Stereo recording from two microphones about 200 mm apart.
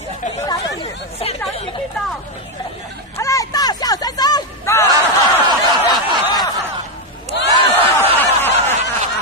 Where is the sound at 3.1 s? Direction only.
15° left (ahead or behind).